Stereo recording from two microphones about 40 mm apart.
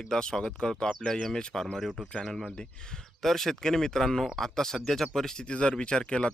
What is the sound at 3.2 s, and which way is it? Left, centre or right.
Speech, centre.